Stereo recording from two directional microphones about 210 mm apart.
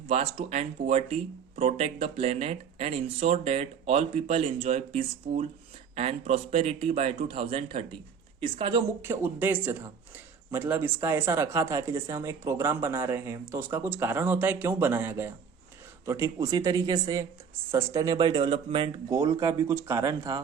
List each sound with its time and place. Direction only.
0.1 s speech: 30° right (ahead or behind)
9.0 s speech: 10° right (ahead or behind)